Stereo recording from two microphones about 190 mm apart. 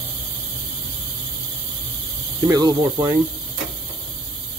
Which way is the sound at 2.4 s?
20° right (ahead or behind).